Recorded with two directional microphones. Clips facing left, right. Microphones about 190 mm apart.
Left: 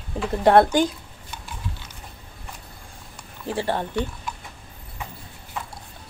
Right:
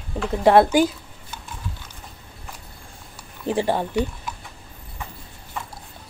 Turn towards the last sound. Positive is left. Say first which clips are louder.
# right 3 dB
turn(degrees=-10)  # may be behind; listen again after turning